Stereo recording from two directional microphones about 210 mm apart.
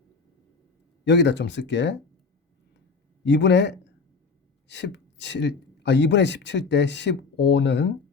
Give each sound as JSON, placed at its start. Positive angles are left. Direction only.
{"t": 1.0, "sound": "speech", "side_deg": 55}
{"t": 3.2, "sound": "speech", "side_deg": 55}